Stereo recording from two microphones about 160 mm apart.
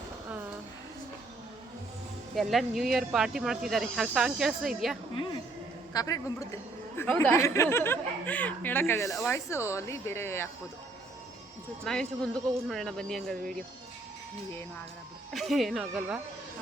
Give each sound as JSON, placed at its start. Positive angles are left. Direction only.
{"t": 2.3, "sound": "speech", "side_deg": 0}
{"t": 5.9, "sound": "a man's voice", "side_deg": 20}
{"t": 11.8, "sound": "speech", "side_deg": 5}
{"t": 15.3, "sound": "speech", "side_deg": 0}